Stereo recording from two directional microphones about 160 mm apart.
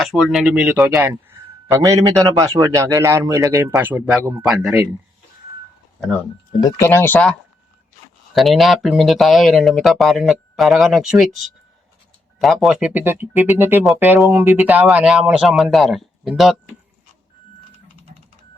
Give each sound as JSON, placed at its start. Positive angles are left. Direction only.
{"t": 0.0, "sound": "speech", "side_deg": 0}
{"t": 0.8, "sound": "a man's voice", "side_deg": -20}
{"t": 4.4, "sound": "speech", "side_deg": -5}
{"t": 6.6, "sound": "speech", "side_deg": 25}
{"t": 6.8, "sound": "speech", "side_deg": 15}
{"t": 8.3, "sound": "speech", "side_deg": 0}